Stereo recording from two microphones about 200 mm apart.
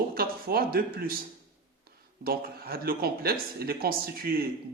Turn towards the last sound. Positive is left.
turn(degrees=-50)  # may be behind; listen again after turning